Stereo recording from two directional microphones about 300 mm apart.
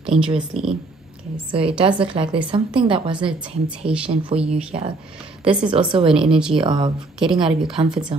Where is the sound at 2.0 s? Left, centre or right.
Centre.